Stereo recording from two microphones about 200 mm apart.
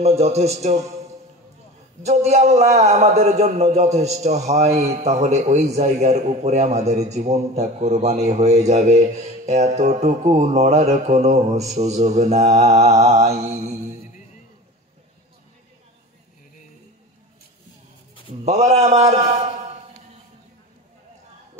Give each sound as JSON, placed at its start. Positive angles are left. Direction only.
{"t": 0.0, "sound": "a man's voice", "side_deg": -30}
{"t": 18.4, "sound": "a man's voice", "side_deg": -35}